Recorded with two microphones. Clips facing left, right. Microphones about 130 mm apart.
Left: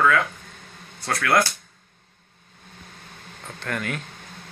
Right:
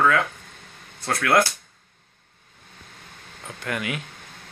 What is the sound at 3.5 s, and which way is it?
Speech, 10° right (ahead or behind).